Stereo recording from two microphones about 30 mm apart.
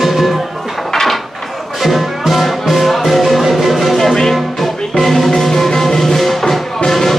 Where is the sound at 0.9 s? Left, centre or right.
Centre.